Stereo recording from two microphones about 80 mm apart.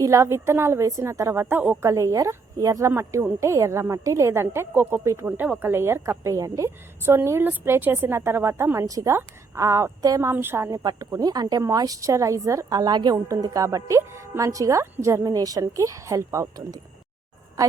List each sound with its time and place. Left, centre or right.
0.0 s speech: right
0.9 s speech: right
10.3 s speech: right
10.8 s speech: right
12.7 s speech: right
13.2 s a woman's voice: right